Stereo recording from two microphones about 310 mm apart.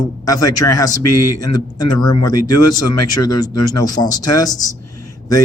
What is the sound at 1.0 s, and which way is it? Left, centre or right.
Speech, left.